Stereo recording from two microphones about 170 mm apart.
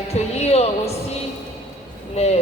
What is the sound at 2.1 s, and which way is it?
Speech, 40° left (ahead or behind).